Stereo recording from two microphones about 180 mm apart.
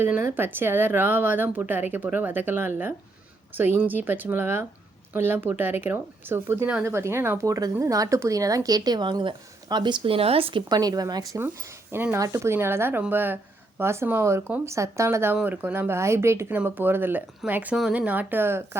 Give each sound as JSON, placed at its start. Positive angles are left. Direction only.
{"t": 0.0, "sound": "speech", "side_deg": -15}